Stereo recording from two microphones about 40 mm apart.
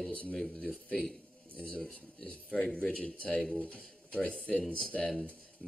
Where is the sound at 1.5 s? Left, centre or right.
Left.